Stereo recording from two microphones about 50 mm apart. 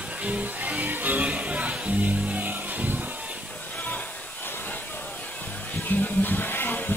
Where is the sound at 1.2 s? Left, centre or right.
Right.